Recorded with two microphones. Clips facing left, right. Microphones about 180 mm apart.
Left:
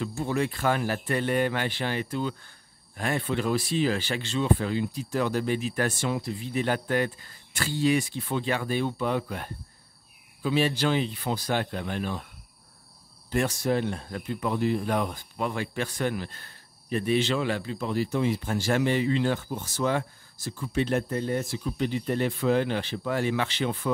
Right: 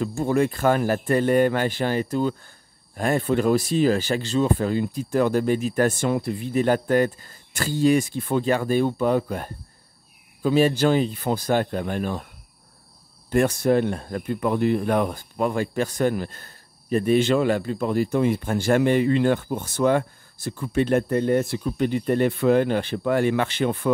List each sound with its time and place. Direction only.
0.0 s a man's voice: 45° right (ahead or behind)
13.3 s a man's voice: 55° right (ahead or behind)